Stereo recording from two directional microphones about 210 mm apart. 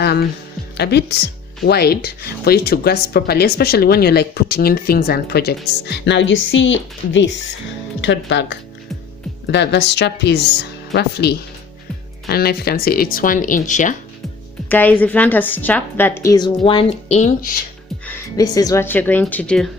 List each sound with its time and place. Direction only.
0.0 s music: 50° left (ahead or behind)
0.8 s a woman's voice: 50° left (ahead or behind); by 13.9 s 35° left (ahead or behind)
14.7 s a woman's voice: 10° left (ahead or behind); by 17.5 s 35° left (ahead or behind)
18.0 s a woman's voice: 10° left (ahead or behind)